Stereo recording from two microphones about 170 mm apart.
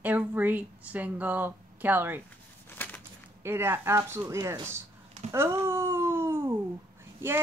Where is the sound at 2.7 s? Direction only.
10° left (ahead or behind).